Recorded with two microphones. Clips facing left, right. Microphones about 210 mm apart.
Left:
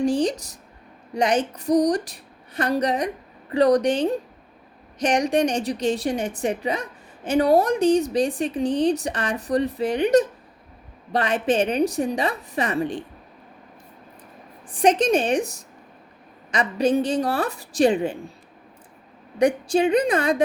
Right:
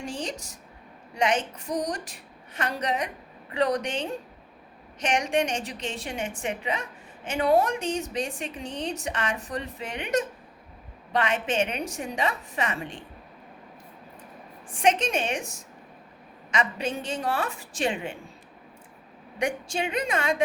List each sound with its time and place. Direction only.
0.0 s a woman's voice: 35° left (ahead or behind)
14.7 s a woman's voice: 35° left (ahead or behind)
19.4 s a woman's voice: 35° left (ahead or behind)